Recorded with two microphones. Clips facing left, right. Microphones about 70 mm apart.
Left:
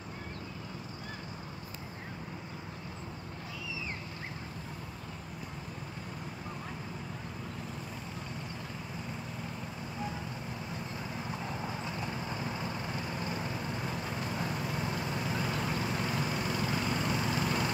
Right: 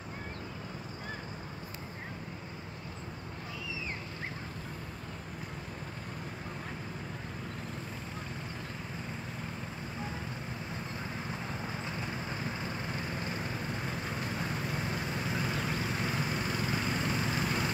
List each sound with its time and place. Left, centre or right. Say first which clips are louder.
11.6 s vehicle: left 1 dB; right